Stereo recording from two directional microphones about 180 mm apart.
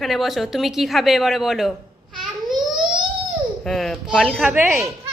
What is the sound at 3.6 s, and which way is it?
A man's voice, centre (ahead or behind).